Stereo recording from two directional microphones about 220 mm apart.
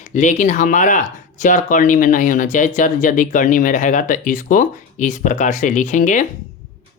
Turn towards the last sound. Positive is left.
turn(degrees=35)  # may be behind; listen again after turning